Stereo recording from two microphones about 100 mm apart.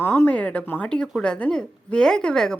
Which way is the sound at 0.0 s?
25° left (ahead or behind).